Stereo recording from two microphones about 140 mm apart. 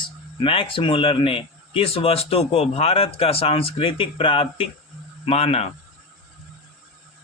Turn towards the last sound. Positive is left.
turn(degrees=45)  # may be behind; listen again after turning